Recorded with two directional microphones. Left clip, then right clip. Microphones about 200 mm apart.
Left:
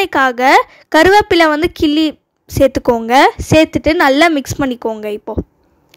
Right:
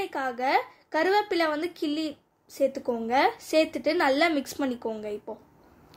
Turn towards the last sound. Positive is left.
turn(degrees=45)  # may be behind; listen again after turning